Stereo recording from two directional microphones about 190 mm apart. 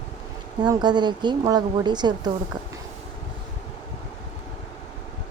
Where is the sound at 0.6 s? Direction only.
25° right (ahead or behind).